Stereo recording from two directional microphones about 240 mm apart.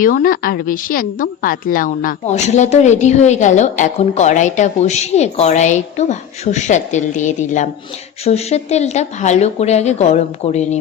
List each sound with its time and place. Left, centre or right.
0.0 s a woman's voice: left